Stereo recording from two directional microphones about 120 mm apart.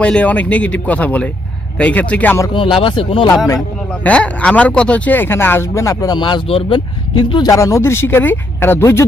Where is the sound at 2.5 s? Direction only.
45° left (ahead or behind).